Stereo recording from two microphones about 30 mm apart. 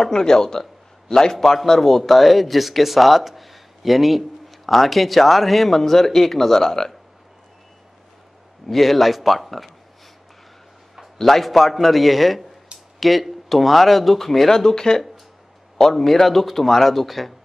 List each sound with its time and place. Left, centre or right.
0.0 s a man's voice: centre
8.6 s speech: centre
11.1 s speech: centre
14.5 s speech: centre
15.9 s speech: centre